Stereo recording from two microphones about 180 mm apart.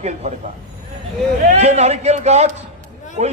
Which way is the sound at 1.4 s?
40° right (ahead or behind).